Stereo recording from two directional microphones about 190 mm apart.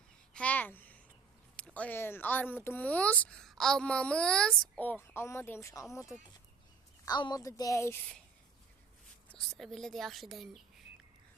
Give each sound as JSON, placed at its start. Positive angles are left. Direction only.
{"t": 0.3, "sound": "a sound", "side_deg": 10}
{"t": 1.5, "sound": "speech", "side_deg": 5}
{"t": 9.3, "sound": "speech", "side_deg": 0}